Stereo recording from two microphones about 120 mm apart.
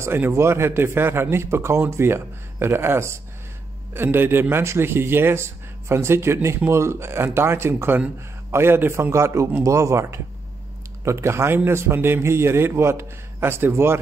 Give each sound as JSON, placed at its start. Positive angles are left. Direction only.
{"t": 0.0, "sound": "speech", "side_deg": -20}